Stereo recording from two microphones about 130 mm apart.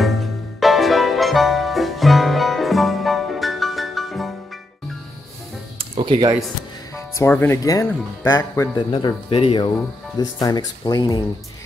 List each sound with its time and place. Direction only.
0.0 s music: centre (ahead or behind)
5.9 s speech: 35° right (ahead or behind)
7.0 s speech: 20° left (ahead or behind)
9.0 s speech: 45° left (ahead or behind)
9.7 s speech: 30° left (ahead or behind)